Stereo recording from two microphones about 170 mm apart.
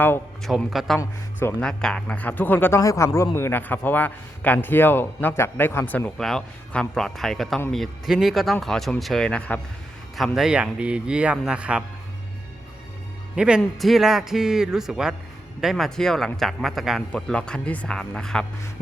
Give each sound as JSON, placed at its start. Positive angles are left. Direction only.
{"t": 0.4, "sound": "speech", "side_deg": 0}
{"t": 0.9, "sound": "speech", "side_deg": 15}
{"t": 13.3, "sound": "speech", "side_deg": -5}